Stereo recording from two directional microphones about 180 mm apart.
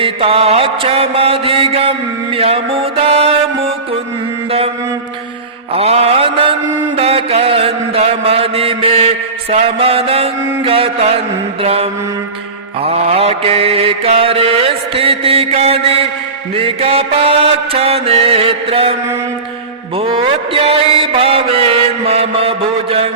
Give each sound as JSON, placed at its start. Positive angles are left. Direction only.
{"t": 0.0, "sound": "mantra", "side_deg": -30}
{"t": 5.7, "sound": "mantra", "side_deg": -35}
{"t": 20.0, "sound": "mantra", "side_deg": -30}